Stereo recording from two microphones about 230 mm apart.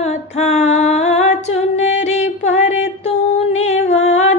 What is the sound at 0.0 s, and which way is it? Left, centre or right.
Female singing, left.